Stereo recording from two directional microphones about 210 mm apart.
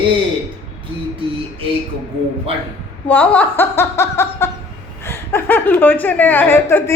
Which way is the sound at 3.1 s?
10° left (ahead or behind).